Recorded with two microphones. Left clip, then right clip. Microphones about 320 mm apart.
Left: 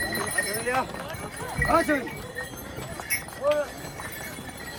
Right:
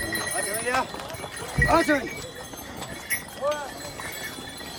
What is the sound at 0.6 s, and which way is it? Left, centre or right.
Clip-clop, right.